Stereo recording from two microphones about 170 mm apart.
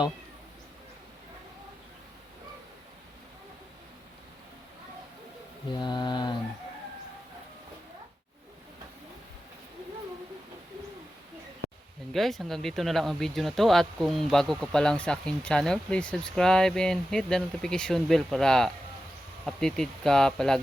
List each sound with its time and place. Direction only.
5.8 s speech: 25° left (ahead or behind)
12.1 s speech: centre (ahead or behind)